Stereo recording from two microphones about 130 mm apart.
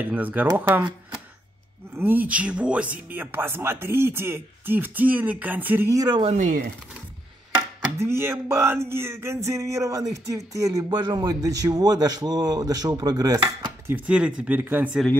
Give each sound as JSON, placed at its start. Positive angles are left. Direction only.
{"t": 0.0, "sound": "speech", "side_deg": -15}
{"t": 2.0, "sound": "speech", "side_deg": -15}
{"t": 5.9, "sound": "speech", "side_deg": -35}
{"t": 6.3, "sound": "speech", "side_deg": -70}
{"t": 8.0, "sound": "a sound", "side_deg": -20}
{"t": 13.8, "sound": "speech", "side_deg": -10}